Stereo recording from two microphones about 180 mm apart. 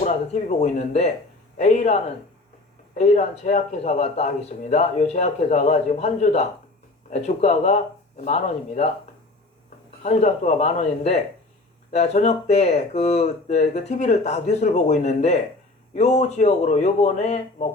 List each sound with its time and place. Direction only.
0.0 s speech: 40° left (ahead or behind)
10.0 s speech: 40° left (ahead or behind)